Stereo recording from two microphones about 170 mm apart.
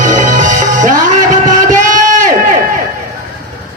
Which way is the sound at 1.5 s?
50° right (ahead or behind).